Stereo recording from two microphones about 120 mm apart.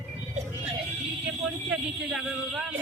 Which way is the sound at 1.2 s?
5° right (ahead or behind).